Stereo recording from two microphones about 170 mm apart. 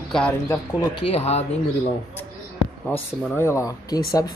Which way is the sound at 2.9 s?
15° left (ahead or behind).